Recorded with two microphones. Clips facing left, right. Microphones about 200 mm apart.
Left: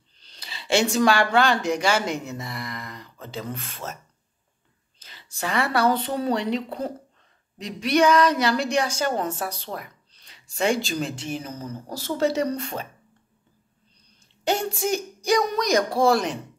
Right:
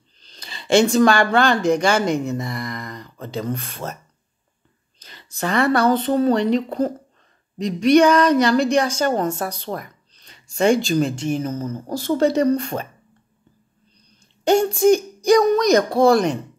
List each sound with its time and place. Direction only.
0.2 s speech: 10° left (ahead or behind)
3.6 s speech: 40° right (ahead or behind)
5.3 s speech: 5° left (ahead or behind)
8.9 s speech: 45° right (ahead or behind)
9.6 s a sound: 50° right (ahead or behind)
10.5 s speech: centre (ahead or behind)
11.1 s speech: 45° right (ahead or behind)
11.9 s speech: 5° left (ahead or behind)
12.5 s speech: 55° right (ahead or behind)
14.6 s speech: 5° left (ahead or behind)